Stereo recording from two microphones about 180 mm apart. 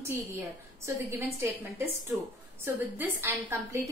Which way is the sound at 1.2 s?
15° right (ahead or behind).